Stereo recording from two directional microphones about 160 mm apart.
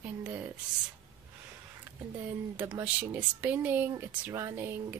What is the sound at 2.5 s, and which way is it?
Speech, 10° right (ahead or behind).